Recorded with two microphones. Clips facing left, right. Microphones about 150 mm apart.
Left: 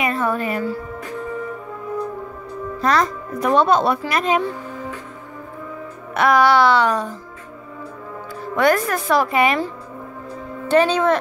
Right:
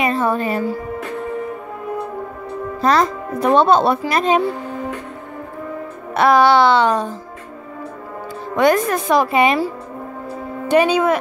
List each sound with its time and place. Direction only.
0.0 s a woman's voice: 25° right (ahead or behind)
2.8 s speech: 30° right (ahead or behind)
6.1 s speech: 30° right (ahead or behind)
8.5 s speech: 20° right (ahead or behind)
10.7 s speech: 10° right (ahead or behind)